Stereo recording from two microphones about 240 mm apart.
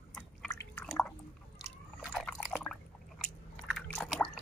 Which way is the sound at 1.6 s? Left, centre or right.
Centre.